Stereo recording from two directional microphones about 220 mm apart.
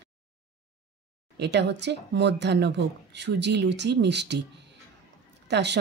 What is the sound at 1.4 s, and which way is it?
Speech, 50° right (ahead or behind).